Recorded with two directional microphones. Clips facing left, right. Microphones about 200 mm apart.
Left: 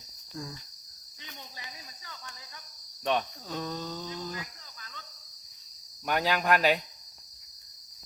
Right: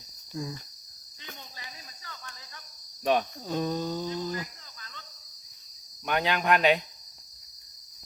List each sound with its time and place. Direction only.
0.4 s speech: 15° right (ahead or behind)
3.0 s speech: 10° right (ahead or behind)
6.1 s speech: 5° left (ahead or behind)